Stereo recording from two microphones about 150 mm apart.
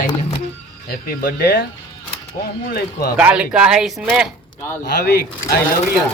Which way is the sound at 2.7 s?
90° left.